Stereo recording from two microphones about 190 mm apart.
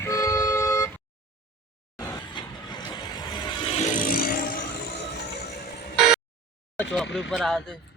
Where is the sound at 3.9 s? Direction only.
45° left (ahead or behind).